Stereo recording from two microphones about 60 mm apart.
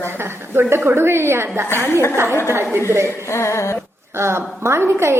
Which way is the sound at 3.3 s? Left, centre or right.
Left.